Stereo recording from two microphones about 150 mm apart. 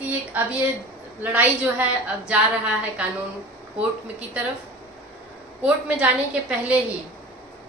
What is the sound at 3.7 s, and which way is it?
Speech, 10° right (ahead or behind).